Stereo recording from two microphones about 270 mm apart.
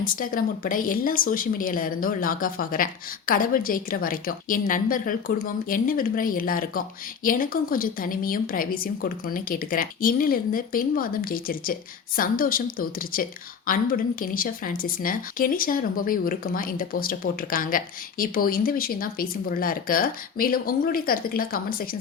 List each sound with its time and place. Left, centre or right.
0.0 s speech: left